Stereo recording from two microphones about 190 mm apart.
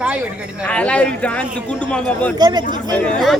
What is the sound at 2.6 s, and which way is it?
Speech, 40° left (ahead or behind).